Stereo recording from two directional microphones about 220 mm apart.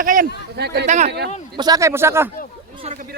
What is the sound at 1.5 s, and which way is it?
Speech, 15° right (ahead or behind).